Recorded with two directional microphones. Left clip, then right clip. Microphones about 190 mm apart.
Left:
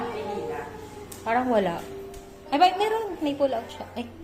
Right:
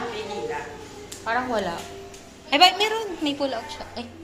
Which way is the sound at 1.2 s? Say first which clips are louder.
Left 2 dB; 40° left (ahead or behind).